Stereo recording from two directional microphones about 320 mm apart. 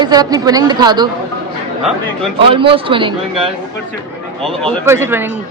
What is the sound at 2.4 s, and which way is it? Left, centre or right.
Speech, centre.